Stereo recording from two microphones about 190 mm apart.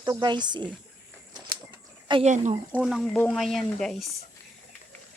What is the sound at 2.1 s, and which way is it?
Speech, 35° right (ahead or behind).